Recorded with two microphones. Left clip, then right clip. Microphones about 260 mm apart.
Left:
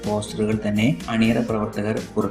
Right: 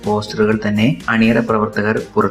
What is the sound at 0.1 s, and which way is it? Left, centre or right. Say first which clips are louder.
Speech: right 8 dB; centre.